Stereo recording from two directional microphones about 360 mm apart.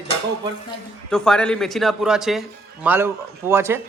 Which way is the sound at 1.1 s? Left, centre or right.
Centre.